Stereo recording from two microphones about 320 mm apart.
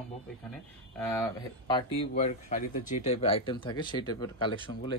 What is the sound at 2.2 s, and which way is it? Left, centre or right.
Speech, left.